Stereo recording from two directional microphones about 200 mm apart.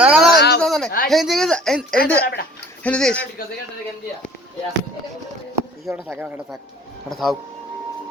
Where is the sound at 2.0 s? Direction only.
50° left (ahead or behind).